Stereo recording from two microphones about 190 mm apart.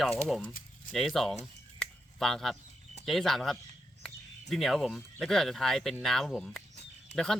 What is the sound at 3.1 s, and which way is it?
Speech, centre (ahead or behind).